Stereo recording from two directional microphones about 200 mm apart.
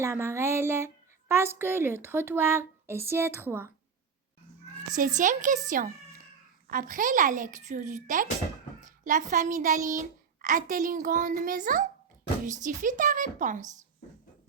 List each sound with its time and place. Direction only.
0.0 s speech: 15° right (ahead or behind)
4.9 s a child's voice: 40° right (ahead or behind)